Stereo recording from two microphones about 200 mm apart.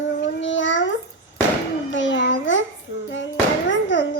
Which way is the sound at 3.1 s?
65° left (ahead or behind).